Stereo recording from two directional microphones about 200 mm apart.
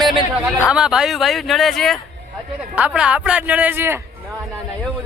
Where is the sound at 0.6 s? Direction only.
5° right (ahead or behind).